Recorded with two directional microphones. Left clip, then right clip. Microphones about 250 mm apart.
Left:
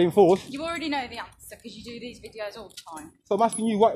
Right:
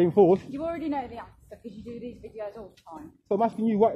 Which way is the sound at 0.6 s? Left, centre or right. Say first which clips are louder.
Left 2 dB; centre.